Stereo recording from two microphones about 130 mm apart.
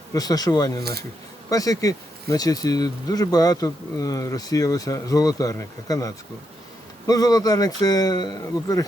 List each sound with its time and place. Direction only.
0.1 s speech: 30° left (ahead or behind)